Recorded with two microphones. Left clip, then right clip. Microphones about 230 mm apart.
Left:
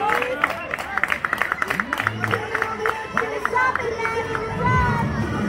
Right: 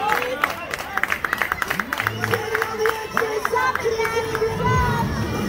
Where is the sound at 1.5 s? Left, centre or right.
Right.